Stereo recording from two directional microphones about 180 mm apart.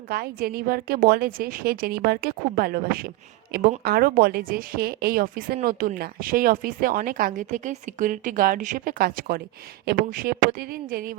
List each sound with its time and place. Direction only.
0.1 s a woman's voice: 60° right (ahead or behind)